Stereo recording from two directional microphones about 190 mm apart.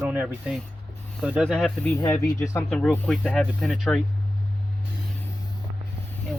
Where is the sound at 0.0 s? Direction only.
10° right (ahead or behind).